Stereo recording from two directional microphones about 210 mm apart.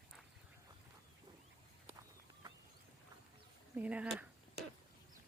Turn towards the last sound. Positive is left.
turn(degrees=-5)  # may be behind; listen again after turning